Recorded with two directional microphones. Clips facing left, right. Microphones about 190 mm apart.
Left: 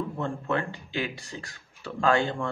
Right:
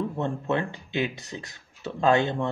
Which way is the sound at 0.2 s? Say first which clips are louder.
Right 1 dB; 20° right (ahead or behind).